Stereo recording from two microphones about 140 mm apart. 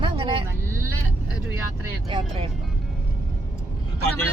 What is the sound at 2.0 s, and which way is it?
Speech, 35° right (ahead or behind).